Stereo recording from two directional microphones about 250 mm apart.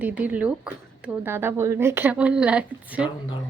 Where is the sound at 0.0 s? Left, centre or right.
Centre.